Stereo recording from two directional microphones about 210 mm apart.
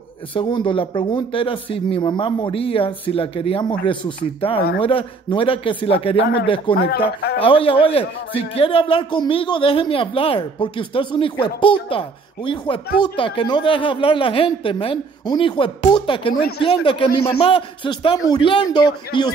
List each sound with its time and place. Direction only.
0.3 s a man's voice: 25° left (ahead or behind)
6.7 s speech: 50° left (ahead or behind)
7.4 s a man's voice: 25° left (ahead or behind)